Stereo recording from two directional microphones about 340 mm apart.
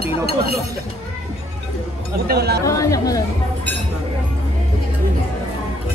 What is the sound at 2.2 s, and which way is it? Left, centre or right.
Speech, right.